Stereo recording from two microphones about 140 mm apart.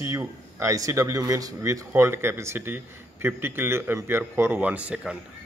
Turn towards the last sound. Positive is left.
turn(degrees=-5)  # may be behind; listen again after turning